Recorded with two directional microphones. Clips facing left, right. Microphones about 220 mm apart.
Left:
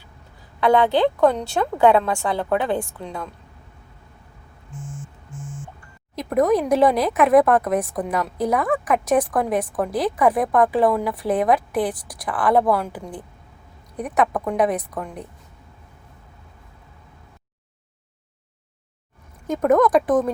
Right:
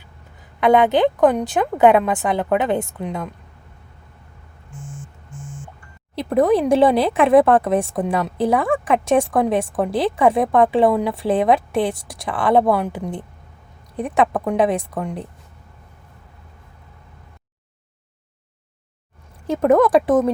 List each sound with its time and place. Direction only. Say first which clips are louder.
0.6 s speech: right 2 dB; 20° right (ahead or behind)
6.1 s speech: right 2 dB; 30° right (ahead or behind)
19.5 s speech: right 2 dB; 30° right (ahead or behind)